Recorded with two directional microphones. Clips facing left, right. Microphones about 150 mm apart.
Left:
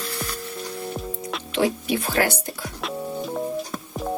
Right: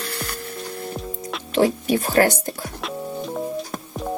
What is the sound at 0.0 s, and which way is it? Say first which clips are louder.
Music: even; 65° right (ahead or behind).